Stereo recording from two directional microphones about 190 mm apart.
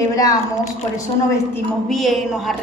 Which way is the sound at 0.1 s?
20° left (ahead or behind).